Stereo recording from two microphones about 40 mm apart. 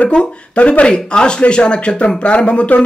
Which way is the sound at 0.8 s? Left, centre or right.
Left.